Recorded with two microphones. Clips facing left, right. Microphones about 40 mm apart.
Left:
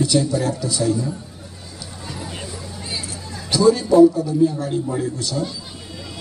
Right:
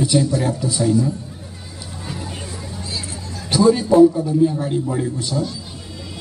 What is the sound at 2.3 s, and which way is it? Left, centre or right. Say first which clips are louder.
Hubbub: right 1 dB; left.